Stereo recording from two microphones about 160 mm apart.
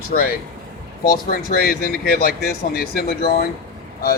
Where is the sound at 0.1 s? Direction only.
70° left (ahead or behind).